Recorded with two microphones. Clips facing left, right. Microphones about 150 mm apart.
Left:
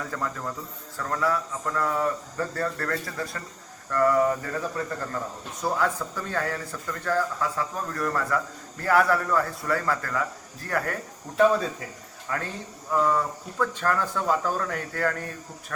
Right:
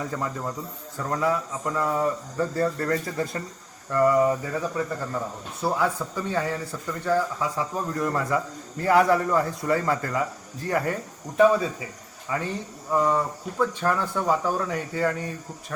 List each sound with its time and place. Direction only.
0.0 s a man's voice: 15° right (ahead or behind)
3.9 s speech: 10° right (ahead or behind)